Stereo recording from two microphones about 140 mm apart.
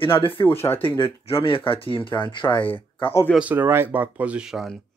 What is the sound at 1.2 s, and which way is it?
Speech, 40° left (ahead or behind).